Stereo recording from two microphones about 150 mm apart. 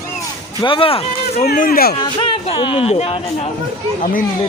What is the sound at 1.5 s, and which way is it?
Speech, 75° left (ahead or behind).